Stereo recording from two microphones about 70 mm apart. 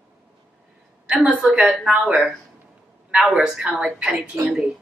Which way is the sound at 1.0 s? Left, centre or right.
Centre.